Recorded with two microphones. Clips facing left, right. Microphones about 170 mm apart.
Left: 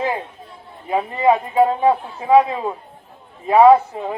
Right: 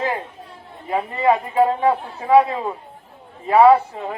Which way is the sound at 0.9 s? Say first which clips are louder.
Left 2 dB; 5° left (ahead or behind).